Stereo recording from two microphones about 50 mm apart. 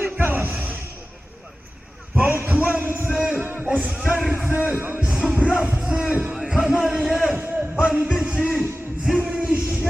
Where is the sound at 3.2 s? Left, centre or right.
Right.